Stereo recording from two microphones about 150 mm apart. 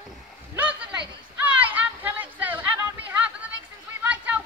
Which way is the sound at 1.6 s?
10° right (ahead or behind).